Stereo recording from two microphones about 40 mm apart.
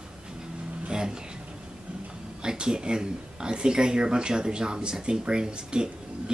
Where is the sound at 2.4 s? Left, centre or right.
Centre.